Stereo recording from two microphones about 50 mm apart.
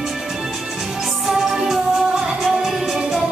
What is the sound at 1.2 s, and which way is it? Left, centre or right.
Music, centre.